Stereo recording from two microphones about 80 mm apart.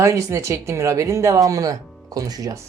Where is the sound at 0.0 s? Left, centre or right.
Right.